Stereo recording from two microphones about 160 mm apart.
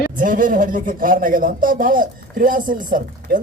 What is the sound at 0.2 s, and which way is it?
A man's voice, 60° right (ahead or behind).